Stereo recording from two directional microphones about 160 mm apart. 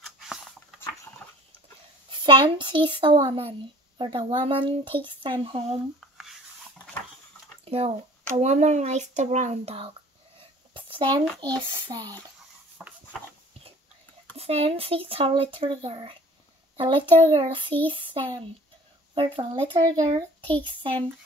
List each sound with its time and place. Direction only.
0.0 s patter: centre (ahead or behind)
2.0 s speech: 30° right (ahead or behind)
7.6 s speech: 35° right (ahead or behind)
10.7 s a sound: 30° right (ahead or behind)
11.2 s a child's voice: 10° left (ahead or behind)
11.9 s speech: 25° right (ahead or behind)
14.3 s a child's voice: 40° right (ahead or behind)